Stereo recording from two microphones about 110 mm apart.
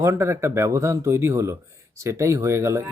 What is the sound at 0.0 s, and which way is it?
Speech, 25° right (ahead or behind).